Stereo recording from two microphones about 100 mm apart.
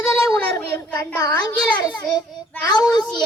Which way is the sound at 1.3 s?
15° left (ahead or behind).